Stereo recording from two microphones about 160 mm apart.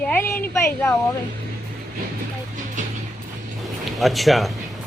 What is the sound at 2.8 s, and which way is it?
Music, 50° right (ahead or behind).